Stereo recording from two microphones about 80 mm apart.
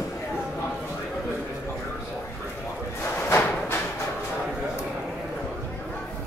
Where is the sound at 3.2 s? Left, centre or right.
Left.